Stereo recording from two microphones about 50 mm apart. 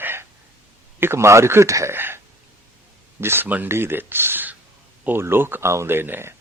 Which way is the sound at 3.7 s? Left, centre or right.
Right.